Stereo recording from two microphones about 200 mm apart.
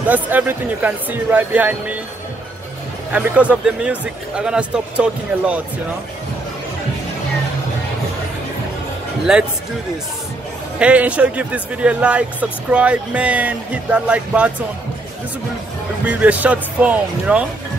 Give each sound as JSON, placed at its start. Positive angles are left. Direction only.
{"t": 0.1, "sound": "speech", "side_deg": -10}
{"t": 3.1, "sound": "speech", "side_deg": -5}
{"t": 9.3, "sound": "speech", "side_deg": -5}
{"t": 10.8, "sound": "speech", "side_deg": -5}
{"t": 16.1, "sound": "speech", "side_deg": -5}